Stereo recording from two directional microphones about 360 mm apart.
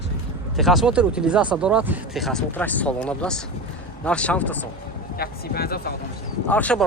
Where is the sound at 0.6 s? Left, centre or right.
Centre.